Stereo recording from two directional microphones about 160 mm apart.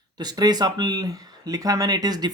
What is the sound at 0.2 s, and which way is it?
Speech, 25° right (ahead or behind).